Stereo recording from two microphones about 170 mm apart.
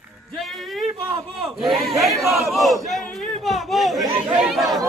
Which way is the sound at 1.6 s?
Centre (ahead or behind).